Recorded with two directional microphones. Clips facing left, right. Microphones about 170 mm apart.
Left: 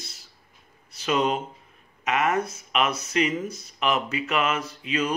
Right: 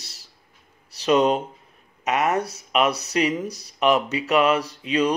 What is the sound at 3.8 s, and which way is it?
Speech, centre (ahead or behind).